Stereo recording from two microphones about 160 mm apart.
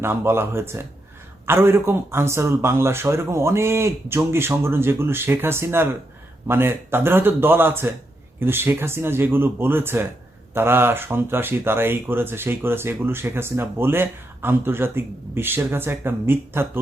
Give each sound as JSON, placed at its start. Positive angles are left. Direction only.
{"t": 0.0, "sound": "speech", "side_deg": -15}